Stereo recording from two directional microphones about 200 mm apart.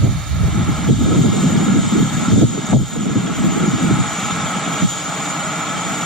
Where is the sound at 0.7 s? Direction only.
Centre (ahead or behind).